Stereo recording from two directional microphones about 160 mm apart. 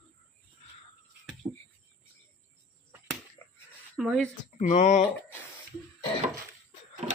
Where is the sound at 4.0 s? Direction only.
Centre (ahead or behind).